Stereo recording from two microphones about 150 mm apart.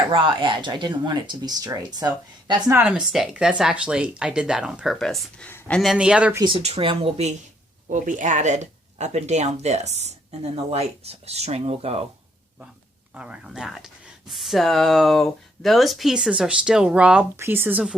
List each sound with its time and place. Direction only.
0.1 s speech: 30° right (ahead or behind)
2.7 s speech: 5° right (ahead or behind); by 5.8 s 10° left (ahead or behind)
5.8 s speech: 5° right (ahead or behind)
6.6 s speech: 45° right (ahead or behind)
7.9 s speech: 55° right (ahead or behind)
13.1 s speech: 5° right (ahead or behind)